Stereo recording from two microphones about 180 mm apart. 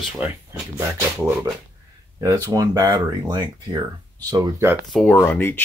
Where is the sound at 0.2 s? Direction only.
10° right (ahead or behind).